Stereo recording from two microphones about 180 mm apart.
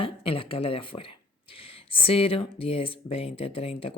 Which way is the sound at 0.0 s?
30° left (ahead or behind).